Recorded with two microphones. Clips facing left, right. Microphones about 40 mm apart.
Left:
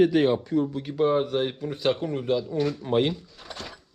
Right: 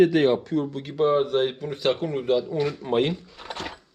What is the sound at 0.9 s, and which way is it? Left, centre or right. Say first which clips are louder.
Speech: right 3 dB; right.